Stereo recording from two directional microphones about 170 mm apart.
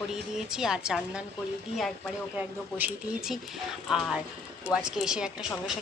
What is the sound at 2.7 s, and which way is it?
A woman's voice, 5° right (ahead or behind).